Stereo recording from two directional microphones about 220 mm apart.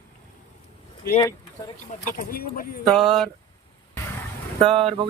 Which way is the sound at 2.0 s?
40° left (ahead or behind).